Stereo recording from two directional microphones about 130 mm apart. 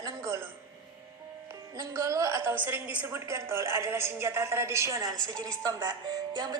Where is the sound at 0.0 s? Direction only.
20° right (ahead or behind).